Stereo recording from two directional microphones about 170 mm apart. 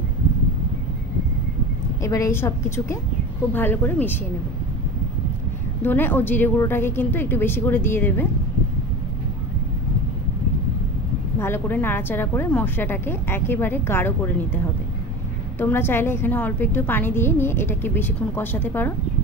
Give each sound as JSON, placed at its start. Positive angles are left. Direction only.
{"t": 2.0, "sound": "a woman's voice", "side_deg": 20}
{"t": 5.8, "sound": "a woman's voice", "side_deg": 10}
{"t": 11.3, "sound": "a woman's voice", "side_deg": 15}
{"t": 15.6, "sound": "a woman's voice", "side_deg": 15}